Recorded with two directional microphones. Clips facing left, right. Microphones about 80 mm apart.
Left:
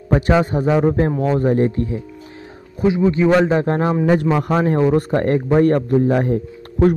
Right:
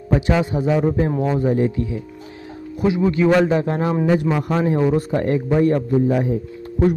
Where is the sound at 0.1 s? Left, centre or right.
Left.